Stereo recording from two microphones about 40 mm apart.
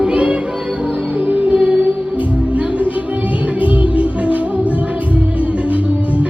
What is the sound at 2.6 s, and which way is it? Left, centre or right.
Music, right.